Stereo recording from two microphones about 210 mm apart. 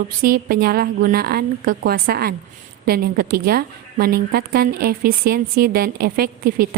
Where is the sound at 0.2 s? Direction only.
45° right (ahead or behind).